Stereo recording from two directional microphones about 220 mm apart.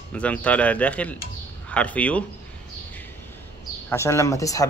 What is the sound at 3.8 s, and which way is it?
Speech, 10° left (ahead or behind).